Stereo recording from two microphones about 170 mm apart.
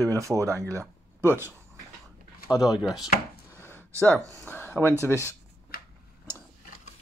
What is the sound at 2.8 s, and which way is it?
Speech, centre (ahead or behind).